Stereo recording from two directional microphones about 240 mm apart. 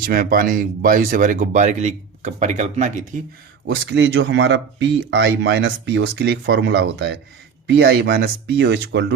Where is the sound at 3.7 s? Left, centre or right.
Right.